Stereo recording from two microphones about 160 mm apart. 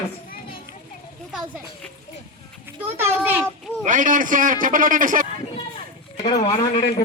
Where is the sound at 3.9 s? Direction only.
55° right (ahead or behind).